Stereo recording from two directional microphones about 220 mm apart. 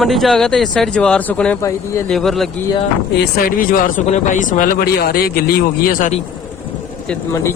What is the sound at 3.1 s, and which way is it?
Speech, 45° left (ahead or behind).